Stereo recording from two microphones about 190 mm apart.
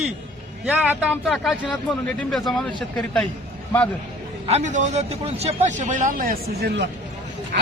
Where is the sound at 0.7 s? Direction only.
10° right (ahead or behind).